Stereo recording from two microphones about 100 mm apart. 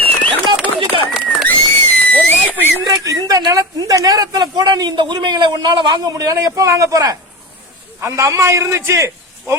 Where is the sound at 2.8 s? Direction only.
40° right (ahead or behind).